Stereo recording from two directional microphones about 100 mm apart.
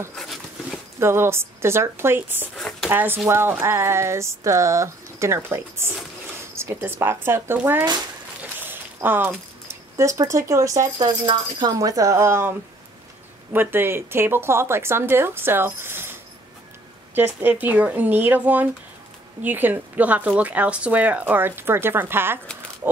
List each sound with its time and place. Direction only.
0.1 s dog: centre (ahead or behind)
0.9 s a woman's voice: 25° right (ahead or behind)
2.5 s a sound: 5° left (ahead or behind)
2.9 s a woman's voice: 20° right (ahead or behind)
8.4 s a sound: 20° right (ahead or behind)
9.9 s a woman's voice: 30° right (ahead or behind)